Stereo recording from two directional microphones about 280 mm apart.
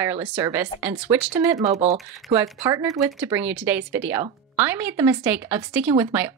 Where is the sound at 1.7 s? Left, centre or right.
Right.